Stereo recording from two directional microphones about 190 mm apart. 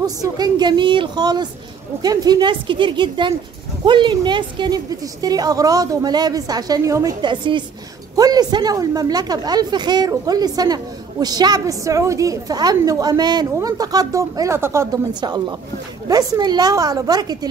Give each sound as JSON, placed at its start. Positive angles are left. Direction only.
{"t": 0.0, "sound": "a woman's voice", "side_deg": -20}